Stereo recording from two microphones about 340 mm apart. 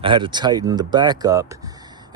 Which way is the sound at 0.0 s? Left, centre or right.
Centre.